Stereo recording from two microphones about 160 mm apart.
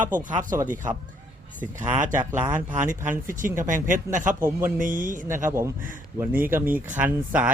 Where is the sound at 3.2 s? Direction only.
55° right (ahead or behind).